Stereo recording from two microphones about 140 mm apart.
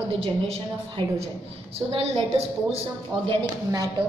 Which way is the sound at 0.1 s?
40° right (ahead or behind).